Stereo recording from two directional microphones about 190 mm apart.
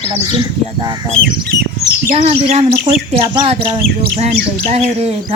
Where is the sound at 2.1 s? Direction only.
35° right (ahead or behind).